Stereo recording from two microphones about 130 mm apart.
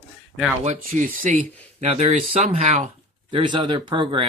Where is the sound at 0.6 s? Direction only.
70° right (ahead or behind).